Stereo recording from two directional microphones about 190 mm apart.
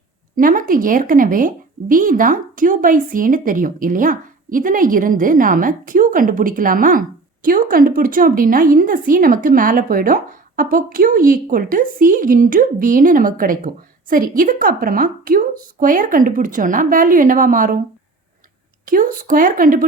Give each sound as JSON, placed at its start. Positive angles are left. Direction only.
{"t": 0.3, "sound": "a woman's voice", "side_deg": -45}
{"t": 18.9, "sound": "a woman's voice", "side_deg": -45}